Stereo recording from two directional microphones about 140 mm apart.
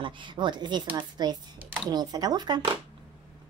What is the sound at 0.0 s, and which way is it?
A woman's voice, 35° right (ahead or behind).